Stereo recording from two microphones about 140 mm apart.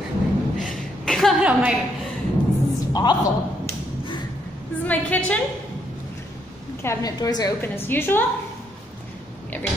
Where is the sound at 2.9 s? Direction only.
30° left (ahead or behind).